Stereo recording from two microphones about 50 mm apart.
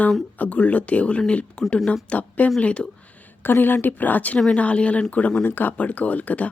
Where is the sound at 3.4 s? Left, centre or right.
Left.